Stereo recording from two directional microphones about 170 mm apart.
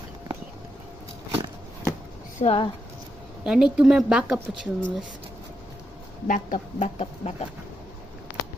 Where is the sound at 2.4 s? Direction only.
35° left (ahead or behind).